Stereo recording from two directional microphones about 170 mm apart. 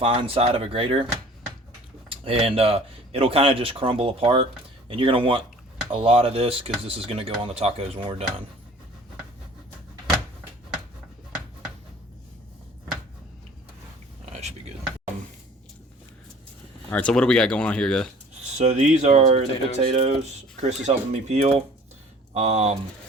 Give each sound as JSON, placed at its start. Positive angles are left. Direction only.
{"t": 0.0, "sound": "speech", "side_deg": -30}
{"t": 2.0, "sound": "speech", "side_deg": -35}
{"t": 16.9, "sound": "speech", "side_deg": 5}
{"t": 18.5, "sound": "speech", "side_deg": -40}